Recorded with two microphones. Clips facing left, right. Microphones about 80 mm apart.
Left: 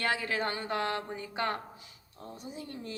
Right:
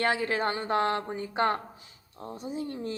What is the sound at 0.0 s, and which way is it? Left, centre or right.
Speech, right.